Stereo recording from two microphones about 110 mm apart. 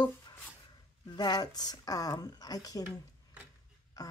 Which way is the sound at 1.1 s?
40° left (ahead or behind).